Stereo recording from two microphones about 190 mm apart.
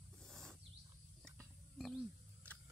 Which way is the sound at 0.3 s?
Centre (ahead or behind).